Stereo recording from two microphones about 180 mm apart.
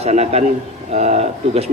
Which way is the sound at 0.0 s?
35° right (ahead or behind).